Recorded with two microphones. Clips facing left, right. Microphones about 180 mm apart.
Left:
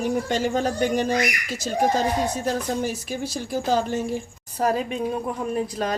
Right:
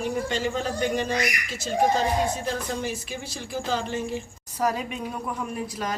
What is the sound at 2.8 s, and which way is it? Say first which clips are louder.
A woman's voice: left 4 dB; 40° left (ahead or behind).